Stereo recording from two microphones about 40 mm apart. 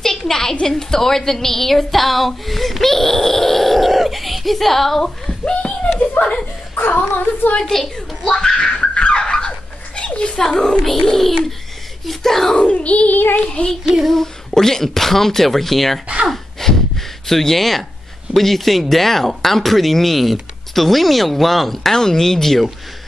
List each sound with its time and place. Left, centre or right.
0.0 s a woman's voice: centre
5.2 s a sound: left
6.2 s speech: left
7.6 s speech: centre
7.9 s giggle: centre
9.2 s a sound: centre
10.9 s a woman's voice: centre
12.5 s a child's voice: left
13.1 s child singing: left
13.5 s child singing: left
14.0 s a woman's voice: centre
16.3 s a sound: centre
18.3 s speech: centre